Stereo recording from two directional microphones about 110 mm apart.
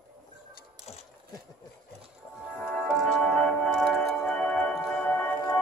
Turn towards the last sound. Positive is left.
turn(degrees=15)  # may be behind; listen again after turning